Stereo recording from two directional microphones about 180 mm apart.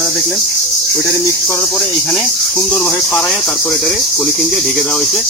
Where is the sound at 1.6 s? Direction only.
Centre (ahead or behind).